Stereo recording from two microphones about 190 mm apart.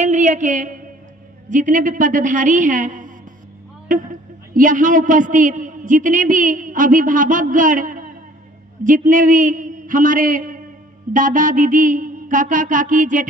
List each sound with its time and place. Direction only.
0.0 s a sound: 40° right (ahead or behind)
1.5 s music: 45° right (ahead or behind)
3.9 s a man's voice: 45° right (ahead or behind)
11.1 s music: 45° right (ahead or behind)